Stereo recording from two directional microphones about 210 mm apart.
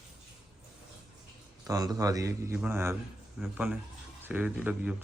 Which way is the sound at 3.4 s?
5° right (ahead or behind).